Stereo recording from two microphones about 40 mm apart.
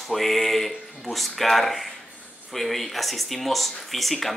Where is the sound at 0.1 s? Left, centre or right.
Centre.